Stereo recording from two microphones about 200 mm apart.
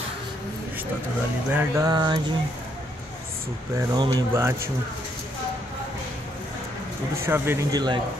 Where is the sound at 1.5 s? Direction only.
15° right (ahead or behind).